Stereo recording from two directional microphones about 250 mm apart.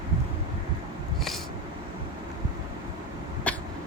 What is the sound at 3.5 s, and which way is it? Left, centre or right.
Cat, centre.